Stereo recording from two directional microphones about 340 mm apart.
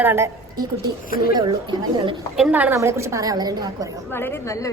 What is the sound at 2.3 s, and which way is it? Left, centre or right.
A woman's voice, centre.